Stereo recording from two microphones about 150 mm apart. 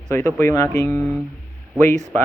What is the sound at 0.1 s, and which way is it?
Speech, 15° left (ahead or behind).